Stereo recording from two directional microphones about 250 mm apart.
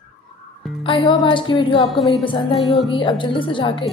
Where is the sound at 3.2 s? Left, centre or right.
Centre.